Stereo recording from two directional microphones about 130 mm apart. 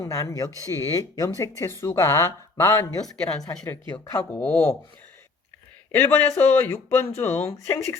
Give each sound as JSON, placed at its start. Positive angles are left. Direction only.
{"t": 0.0, "sound": "speech", "side_deg": 25}
{"t": 4.2, "sound": "a man's voice", "side_deg": 15}
{"t": 5.9, "sound": "a man's voice", "side_deg": 15}